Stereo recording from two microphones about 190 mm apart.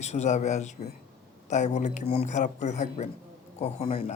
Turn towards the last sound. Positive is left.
turn(degrees=30)  # may be behind; listen again after turning